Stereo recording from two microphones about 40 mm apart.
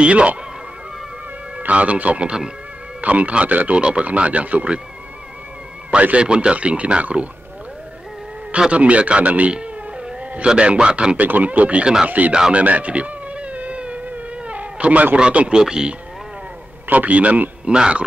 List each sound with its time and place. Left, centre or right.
0.0 s a man's voice: right
1.7 s speech: right
6.1 s a man's voice: right
8.5 s speech: right
9.5 s a sound: right
10.4 s a man's voice: right
11.1 s speech: right
11.8 s speech: centre
12.5 s insect: right
15.5 s a man's voice: centre
16.8 s a man's voice: right
17.6 s a man's voice: right